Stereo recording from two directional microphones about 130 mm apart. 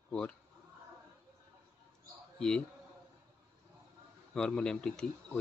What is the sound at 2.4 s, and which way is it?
Speech, 5° left (ahead or behind).